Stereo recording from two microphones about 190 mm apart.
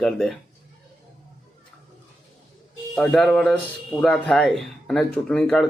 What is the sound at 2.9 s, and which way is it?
Speech, 5° left (ahead or behind).